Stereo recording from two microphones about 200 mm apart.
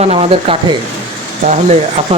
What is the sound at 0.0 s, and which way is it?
Speech, 30° right (ahead or behind).